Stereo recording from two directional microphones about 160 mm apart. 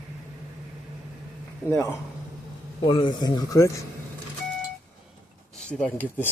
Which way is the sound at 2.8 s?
30° left (ahead or behind).